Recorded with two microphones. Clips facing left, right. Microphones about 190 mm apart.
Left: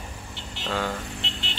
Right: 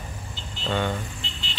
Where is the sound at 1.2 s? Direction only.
75° left (ahead or behind).